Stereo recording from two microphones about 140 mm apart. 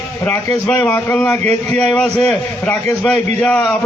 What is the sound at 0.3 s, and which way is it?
A man's voice, 10° left (ahead or behind).